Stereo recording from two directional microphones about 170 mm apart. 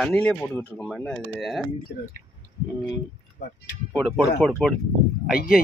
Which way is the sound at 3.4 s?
70° left (ahead or behind).